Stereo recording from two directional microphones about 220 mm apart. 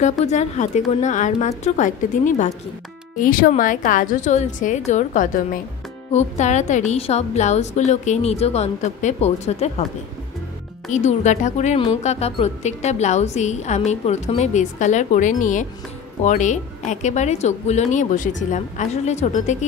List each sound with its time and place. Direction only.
0.2 s a woman's voice: 30° left (ahead or behind)
10.9 s a woman's voice: 35° left (ahead or behind)